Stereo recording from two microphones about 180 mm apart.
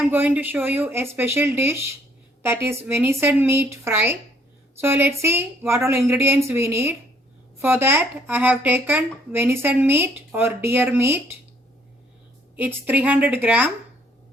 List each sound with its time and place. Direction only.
0.0 s speech: 10° right (ahead or behind)
12.5 s speech: 10° right (ahead or behind)